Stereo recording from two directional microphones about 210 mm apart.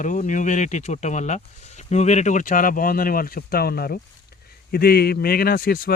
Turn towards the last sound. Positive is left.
turn(degrees=45)  # may be behind; listen again after turning